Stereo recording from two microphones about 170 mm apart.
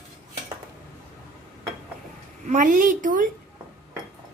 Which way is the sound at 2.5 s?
50° right (ahead or behind).